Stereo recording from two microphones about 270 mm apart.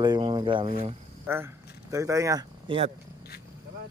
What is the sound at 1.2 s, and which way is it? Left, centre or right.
Speech, centre.